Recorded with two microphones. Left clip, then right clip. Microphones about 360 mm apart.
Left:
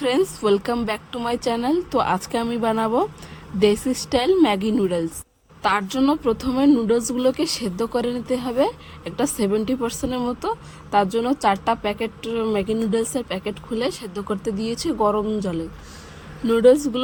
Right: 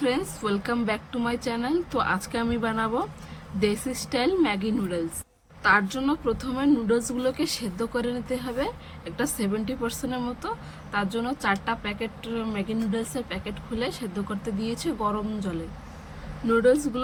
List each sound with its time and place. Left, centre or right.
0.0 s speech: centre
16.5 s speech: centre